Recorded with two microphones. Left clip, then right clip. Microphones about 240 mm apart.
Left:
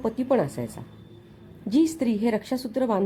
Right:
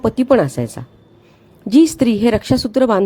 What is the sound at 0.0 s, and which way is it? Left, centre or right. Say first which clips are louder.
Speech: right 10 dB; right.